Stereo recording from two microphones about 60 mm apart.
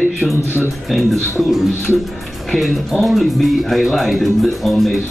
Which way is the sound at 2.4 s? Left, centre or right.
Centre.